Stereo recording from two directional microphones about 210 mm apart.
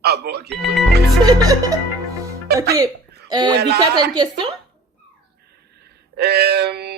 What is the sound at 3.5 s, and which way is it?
Speech, 50° right (ahead or behind).